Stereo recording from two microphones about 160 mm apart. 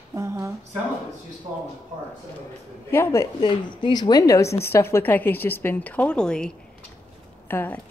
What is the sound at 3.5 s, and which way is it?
A woman's voice, 30° left (ahead or behind).